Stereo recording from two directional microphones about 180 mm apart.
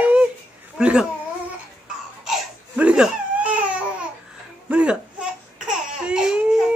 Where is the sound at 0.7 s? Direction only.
5° right (ahead or behind).